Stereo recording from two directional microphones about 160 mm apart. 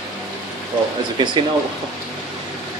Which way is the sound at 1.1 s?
30° right (ahead or behind).